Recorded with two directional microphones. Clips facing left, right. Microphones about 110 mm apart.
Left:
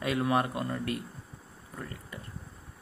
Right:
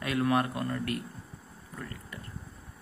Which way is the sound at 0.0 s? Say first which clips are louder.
Even; 25° left (ahead or behind).